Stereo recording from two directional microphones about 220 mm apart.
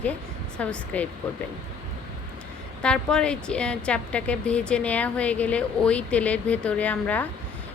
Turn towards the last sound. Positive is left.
turn(degrees=5)  # may be behind; listen again after turning